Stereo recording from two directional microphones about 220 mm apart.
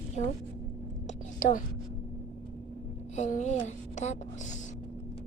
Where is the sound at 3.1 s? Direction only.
35° left (ahead or behind).